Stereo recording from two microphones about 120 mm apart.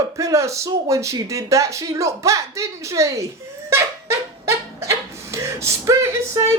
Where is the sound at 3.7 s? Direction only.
20° right (ahead or behind).